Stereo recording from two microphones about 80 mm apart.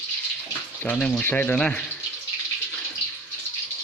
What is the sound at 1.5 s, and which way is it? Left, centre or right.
Speech, centre.